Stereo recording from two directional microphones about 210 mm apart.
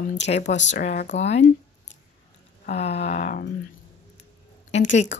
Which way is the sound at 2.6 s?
30° left (ahead or behind).